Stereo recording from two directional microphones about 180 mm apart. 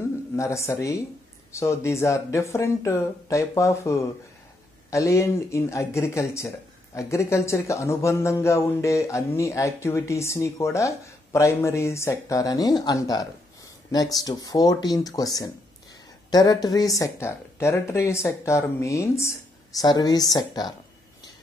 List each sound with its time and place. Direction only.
0.4 s speech: 15° left (ahead or behind)